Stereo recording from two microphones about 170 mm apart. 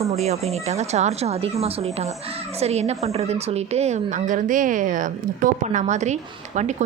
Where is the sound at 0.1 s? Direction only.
40° right (ahead or behind).